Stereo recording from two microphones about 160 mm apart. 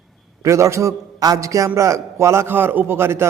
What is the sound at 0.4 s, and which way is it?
A man's voice, 20° right (ahead or behind).